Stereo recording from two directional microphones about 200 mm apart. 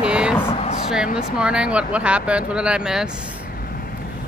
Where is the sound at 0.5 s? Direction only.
30° left (ahead or behind).